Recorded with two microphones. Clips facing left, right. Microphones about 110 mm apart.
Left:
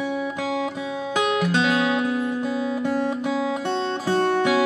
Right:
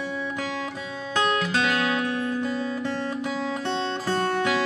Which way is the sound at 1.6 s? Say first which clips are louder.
Left 3 dB; 30° left (ahead or behind).